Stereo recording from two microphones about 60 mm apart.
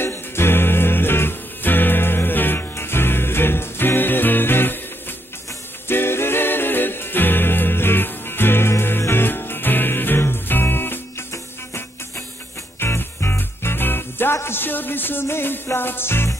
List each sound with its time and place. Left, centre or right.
0.0 s music: left
5.9 s music: left
12.8 s music: left